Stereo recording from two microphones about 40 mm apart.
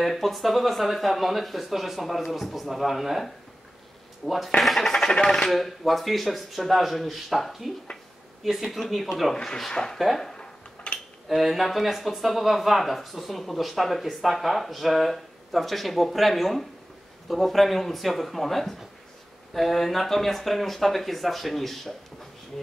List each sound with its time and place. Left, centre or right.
0.0 s speech: centre
4.6 s speech: centre
5.5 s speech: centre
9.3 s speech: centre
10.3 s dishes: left
11.2 s speech: centre